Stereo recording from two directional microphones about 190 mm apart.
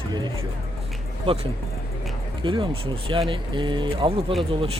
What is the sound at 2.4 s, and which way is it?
Speech, 25° right (ahead or behind).